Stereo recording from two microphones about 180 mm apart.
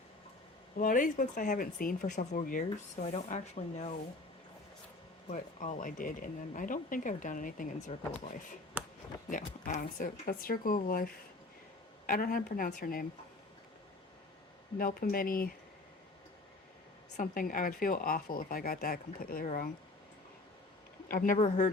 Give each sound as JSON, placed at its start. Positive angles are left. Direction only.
{"t": 0.8, "sound": "speech", "side_deg": 50}
{"t": 3.1, "sound": "speech", "side_deg": 40}
{"t": 5.3, "sound": "speech", "side_deg": 40}
{"t": 9.3, "sound": "speech", "side_deg": 45}
{"t": 14.8, "sound": "speech", "side_deg": 50}
{"t": 17.2, "sound": "speech", "side_deg": 50}
{"t": 21.1, "sound": "speech", "side_deg": 50}
{"t": 21.3, "sound": "speech", "side_deg": 35}